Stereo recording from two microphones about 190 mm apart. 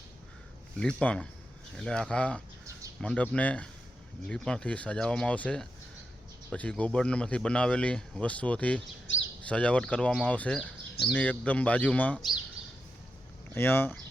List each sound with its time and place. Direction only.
0.8 s speech: 5° left (ahead or behind)
9.1 s speech: 80° left
9.5 s speech: 5° left (ahead or behind)
13.5 s speech: 10° left (ahead or behind)